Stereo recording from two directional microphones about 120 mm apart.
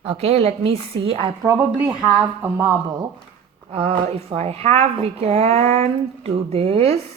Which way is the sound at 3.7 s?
55° right (ahead or behind).